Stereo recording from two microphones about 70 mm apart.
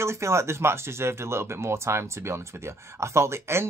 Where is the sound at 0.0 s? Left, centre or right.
Right.